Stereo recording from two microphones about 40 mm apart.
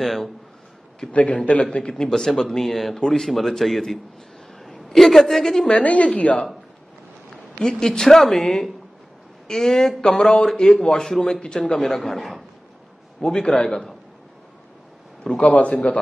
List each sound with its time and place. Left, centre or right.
0.0 s a man's voice: centre
1.3 s a man's voice: left
1.9 s a man's voice: centre
5.7 s a woman's voice: left
7.6 s a man's voice: centre
13.2 s a man's voice: centre
15.2 s a man's voice: left